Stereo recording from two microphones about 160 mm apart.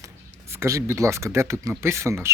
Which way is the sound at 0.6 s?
20° right (ahead or behind).